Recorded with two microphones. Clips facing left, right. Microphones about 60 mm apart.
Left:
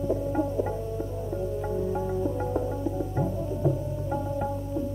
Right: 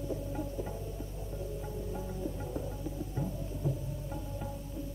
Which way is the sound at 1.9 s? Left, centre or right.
Left.